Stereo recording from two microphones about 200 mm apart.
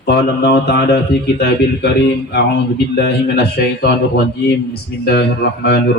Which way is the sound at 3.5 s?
55° left (ahead or behind).